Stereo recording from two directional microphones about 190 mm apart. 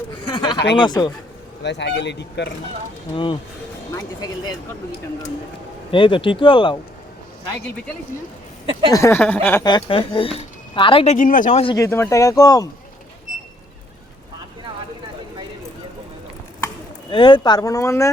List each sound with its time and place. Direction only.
0.3 s a sound: 20° left (ahead or behind)
0.8 s speech: 20° left (ahead or behind)
1.6 s speech: 65° left (ahead or behind)
3.9 s speech: 20° left (ahead or behind)
5.9 s speech: 25° left (ahead or behind)
8.9 s speech: 15° left (ahead or behind)
9.6 s speech: 25° left (ahead or behind); by 11.6 s 45° left (ahead or behind)
11.6 s speech: 20° left (ahead or behind)
17.1 s speech: 25° left (ahead or behind)